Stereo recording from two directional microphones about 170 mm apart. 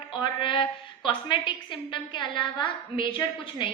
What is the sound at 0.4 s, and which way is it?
A woman's voice, 30° left (ahead or behind).